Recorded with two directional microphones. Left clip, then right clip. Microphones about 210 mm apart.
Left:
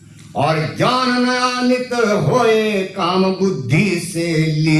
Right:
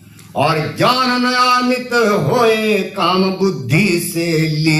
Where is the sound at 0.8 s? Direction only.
40° right (ahead or behind).